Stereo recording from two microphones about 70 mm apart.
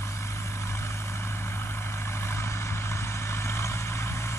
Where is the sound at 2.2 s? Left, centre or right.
Left.